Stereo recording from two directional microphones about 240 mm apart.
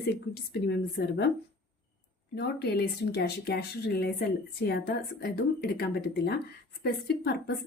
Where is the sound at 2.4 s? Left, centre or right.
Left.